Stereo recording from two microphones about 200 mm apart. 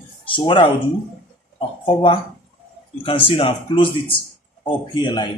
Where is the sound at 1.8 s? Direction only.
25° left (ahead or behind).